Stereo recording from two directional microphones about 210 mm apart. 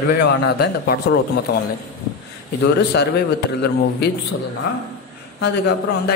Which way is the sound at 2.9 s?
50° left (ahead or behind).